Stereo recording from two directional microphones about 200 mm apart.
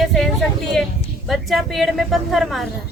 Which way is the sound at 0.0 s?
Centre (ahead or behind).